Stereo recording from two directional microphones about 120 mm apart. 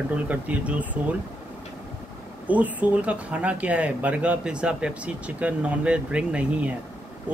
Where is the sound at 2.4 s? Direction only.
10° right (ahead or behind).